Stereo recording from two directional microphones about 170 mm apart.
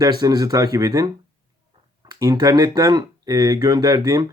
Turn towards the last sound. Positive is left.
turn(degrees=-20)  # may be behind; listen again after turning